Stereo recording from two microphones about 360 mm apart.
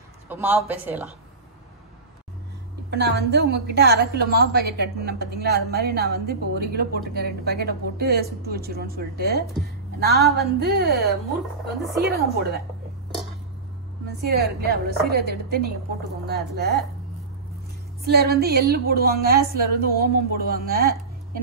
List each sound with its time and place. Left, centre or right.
0.3 s a woman's voice: centre
2.9 s a woman's voice: right
12.0 s a woman's voice: right
14.3 s a woman's voice: right
18.0 s a woman's voice: right